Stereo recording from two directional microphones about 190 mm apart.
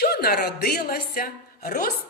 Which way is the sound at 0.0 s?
55° left (ahead or behind).